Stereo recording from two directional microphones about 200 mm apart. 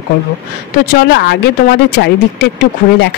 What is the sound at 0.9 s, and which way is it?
Speech, 55° left (ahead or behind).